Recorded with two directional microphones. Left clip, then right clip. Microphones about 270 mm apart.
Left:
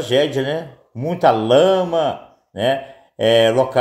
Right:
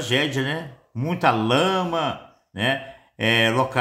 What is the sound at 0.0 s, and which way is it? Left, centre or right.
Speech, centre.